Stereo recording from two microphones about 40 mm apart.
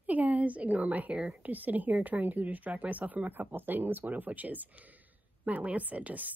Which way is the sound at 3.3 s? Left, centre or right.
Right.